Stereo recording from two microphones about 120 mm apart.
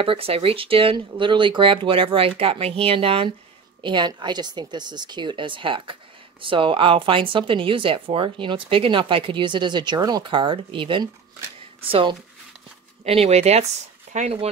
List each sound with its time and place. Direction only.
0.0 s a woman's voice: 50° right (ahead or behind)
13.0 s speech: 60° right (ahead or behind)